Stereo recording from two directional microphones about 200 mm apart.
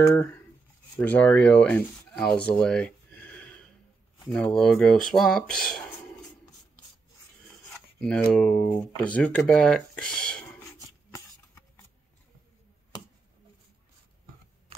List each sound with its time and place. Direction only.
0.0 s speech: 15° left (ahead or behind)
7.7 s speech: 5° left (ahead or behind)
8.6 s speech: 25° left (ahead or behind)
9.1 s speech: 5° left (ahead or behind)
10.8 s a sound: 15° left (ahead or behind)